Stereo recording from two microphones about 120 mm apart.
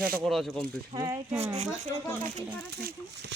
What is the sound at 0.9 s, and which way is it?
Speech, 25° right (ahead or behind).